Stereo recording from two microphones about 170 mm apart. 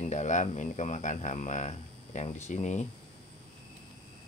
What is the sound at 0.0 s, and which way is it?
Speech, 45° left (ahead or behind).